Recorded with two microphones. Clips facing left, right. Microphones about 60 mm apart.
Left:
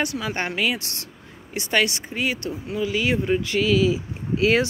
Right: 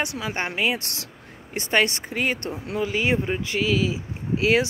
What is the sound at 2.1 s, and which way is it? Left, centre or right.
Speech, right.